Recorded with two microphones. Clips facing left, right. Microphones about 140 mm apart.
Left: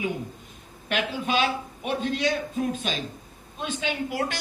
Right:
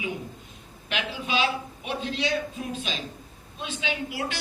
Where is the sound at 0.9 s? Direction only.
50° left (ahead or behind).